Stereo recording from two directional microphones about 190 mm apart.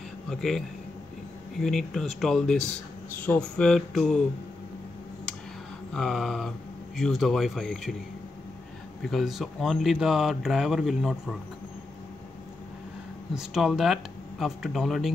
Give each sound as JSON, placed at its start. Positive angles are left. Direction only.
{"t": 0.3, "sound": "speech", "side_deg": 0}
{"t": 5.9, "sound": "speech", "side_deg": 0}
{"t": 9.0, "sound": "speech", "side_deg": 0}
{"t": 13.3, "sound": "speech", "side_deg": -5}